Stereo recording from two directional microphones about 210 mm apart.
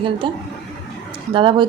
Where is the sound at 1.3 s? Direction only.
25° right (ahead or behind).